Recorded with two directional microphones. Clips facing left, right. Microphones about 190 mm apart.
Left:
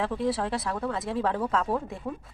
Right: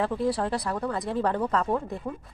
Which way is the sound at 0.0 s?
Centre (ahead or behind).